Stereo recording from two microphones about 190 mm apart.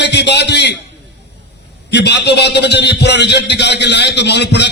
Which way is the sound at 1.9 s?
65° left (ahead or behind).